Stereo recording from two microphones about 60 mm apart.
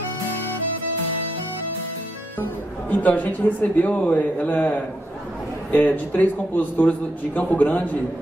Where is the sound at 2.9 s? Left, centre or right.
Left.